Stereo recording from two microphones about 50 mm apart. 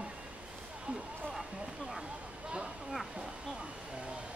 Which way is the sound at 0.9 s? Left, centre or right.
Right.